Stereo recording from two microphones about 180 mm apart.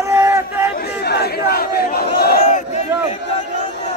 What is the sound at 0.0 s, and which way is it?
Crowd, 15° right (ahead or behind).